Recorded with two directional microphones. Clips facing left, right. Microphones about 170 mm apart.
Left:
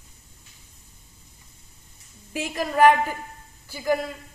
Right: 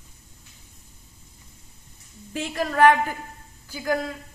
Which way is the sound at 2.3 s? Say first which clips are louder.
Even; 10° left (ahead or behind).